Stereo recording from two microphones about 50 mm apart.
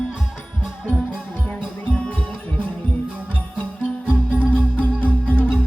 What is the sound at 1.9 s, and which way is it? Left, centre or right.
Music, left.